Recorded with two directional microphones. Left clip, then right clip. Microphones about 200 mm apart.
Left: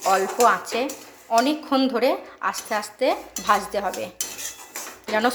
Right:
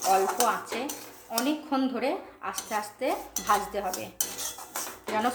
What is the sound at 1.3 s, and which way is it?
A woman's voice, 20° left (ahead or behind).